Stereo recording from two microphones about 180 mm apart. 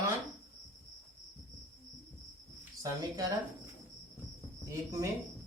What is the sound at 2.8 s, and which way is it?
Speech, 20° right (ahead or behind).